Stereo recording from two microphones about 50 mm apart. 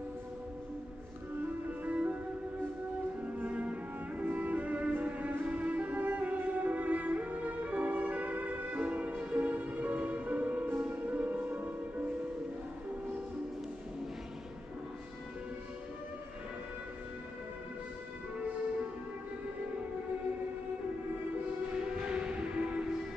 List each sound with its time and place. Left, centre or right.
1.7 s music: right
3.2 s music: right
21.8 s a sound: centre